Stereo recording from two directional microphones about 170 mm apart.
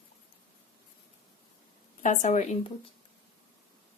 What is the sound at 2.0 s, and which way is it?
Speech, 45° left (ahead or behind).